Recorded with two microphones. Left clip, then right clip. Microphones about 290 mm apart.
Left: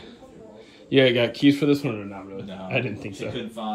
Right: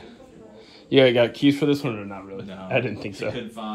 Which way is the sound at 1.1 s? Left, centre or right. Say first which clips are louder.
Right 1 dB; left.